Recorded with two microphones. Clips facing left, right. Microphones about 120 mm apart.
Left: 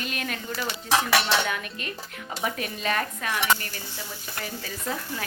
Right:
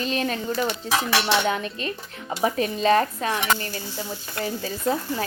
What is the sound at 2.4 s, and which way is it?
Sizzle, 30° right (ahead or behind).